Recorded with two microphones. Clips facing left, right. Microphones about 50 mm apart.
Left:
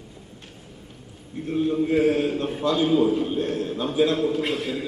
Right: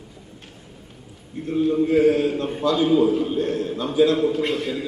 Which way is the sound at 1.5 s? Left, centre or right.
Centre.